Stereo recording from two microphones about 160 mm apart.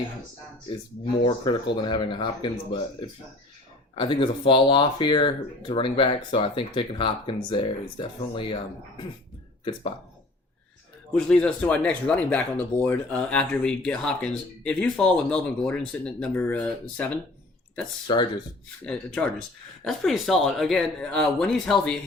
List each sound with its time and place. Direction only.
1.2 s speech: 30° left (ahead or behind)
3.9 s speech: 30° left (ahead or behind)
11.1 s speech: 5° left (ahead or behind)
18.9 s speech: 5° left (ahead or behind)